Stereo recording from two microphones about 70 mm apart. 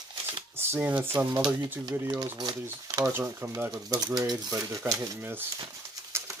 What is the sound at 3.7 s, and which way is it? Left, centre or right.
Speech, right.